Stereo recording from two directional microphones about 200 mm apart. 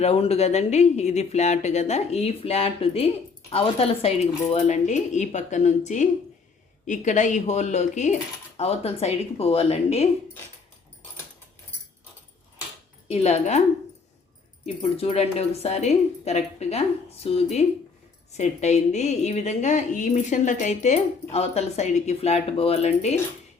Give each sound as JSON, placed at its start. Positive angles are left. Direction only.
{"t": 0.0, "sound": "speech", "side_deg": 30}
{"t": 13.1, "sound": "speech", "side_deg": 30}
{"t": 14.8, "sound": "speech", "side_deg": 30}